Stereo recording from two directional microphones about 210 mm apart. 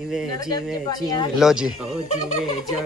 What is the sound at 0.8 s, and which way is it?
Speech, 20° left (ahead or behind).